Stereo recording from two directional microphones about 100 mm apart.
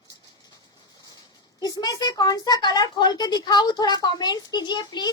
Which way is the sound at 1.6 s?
40° left (ahead or behind).